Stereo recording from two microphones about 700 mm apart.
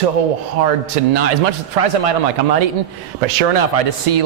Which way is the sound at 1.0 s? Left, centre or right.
Right.